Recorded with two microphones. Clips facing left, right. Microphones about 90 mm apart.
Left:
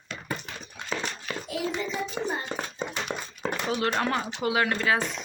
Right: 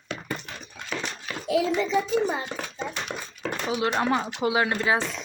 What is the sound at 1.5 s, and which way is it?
Speech, 90° right.